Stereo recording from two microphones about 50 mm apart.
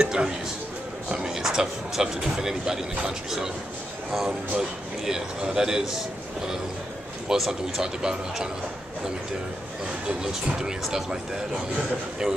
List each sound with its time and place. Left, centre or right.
0.0 s a sound: centre
1.1 s speech: centre
4.6 s speech: centre
7.3 s speech: centre
10.8 s speech: centre